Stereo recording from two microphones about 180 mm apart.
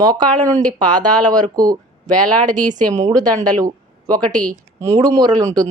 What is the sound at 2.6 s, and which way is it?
Speech, 45° right (ahead or behind).